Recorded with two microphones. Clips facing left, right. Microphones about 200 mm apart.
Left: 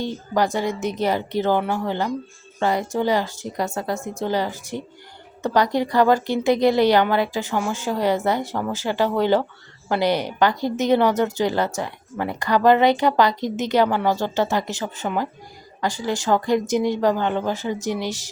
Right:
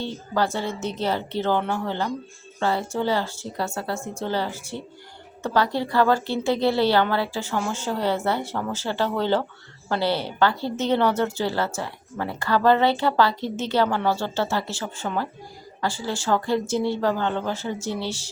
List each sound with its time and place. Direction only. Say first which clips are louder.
0.0 s a woman's voice: left 3 dB; 15° left (ahead or behind)